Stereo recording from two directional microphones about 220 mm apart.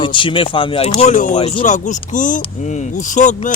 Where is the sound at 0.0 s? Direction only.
20° left (ahead or behind).